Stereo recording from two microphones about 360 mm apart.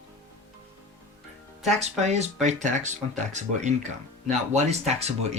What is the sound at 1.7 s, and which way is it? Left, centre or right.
Speech, centre.